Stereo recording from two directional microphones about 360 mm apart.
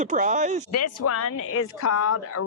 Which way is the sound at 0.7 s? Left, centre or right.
Left.